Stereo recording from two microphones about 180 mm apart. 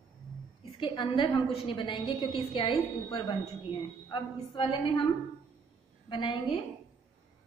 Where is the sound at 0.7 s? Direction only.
25° left (ahead or behind).